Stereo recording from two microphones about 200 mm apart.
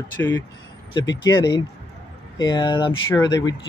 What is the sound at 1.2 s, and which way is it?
Speech, 20° left (ahead or behind).